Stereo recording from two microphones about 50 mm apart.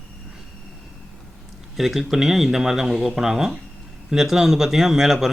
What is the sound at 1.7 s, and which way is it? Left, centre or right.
Speech, centre.